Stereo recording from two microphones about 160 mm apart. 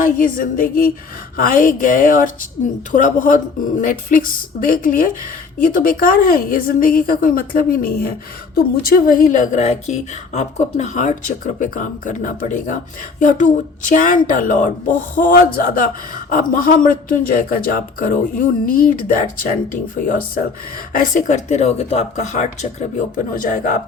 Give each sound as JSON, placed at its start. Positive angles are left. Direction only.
{"t": 0.0, "sound": "speech", "side_deg": 60}